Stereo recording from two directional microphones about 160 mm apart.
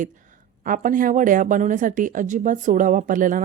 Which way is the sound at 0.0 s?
55° right (ahead or behind).